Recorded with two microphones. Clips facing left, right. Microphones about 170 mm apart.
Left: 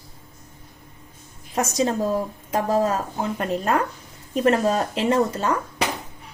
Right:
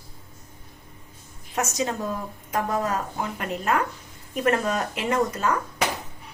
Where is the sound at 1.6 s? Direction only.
35° left (ahead or behind).